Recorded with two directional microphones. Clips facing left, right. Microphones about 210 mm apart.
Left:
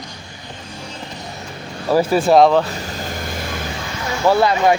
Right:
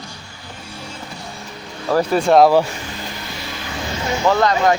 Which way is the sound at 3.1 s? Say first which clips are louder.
Left 5 dB; 50° left (ahead or behind).